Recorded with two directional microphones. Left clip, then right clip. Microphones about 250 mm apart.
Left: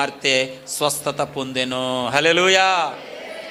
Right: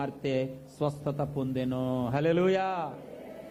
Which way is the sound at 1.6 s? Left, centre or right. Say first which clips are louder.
Left 11 dB; centre.